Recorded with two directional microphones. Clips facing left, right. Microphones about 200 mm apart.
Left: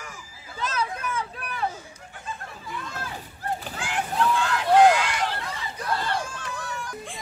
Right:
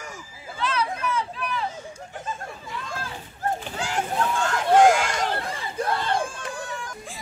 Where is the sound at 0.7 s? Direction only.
50° left (ahead or behind).